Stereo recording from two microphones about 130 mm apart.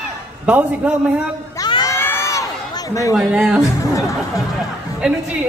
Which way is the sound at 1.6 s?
30° left (ahead or behind).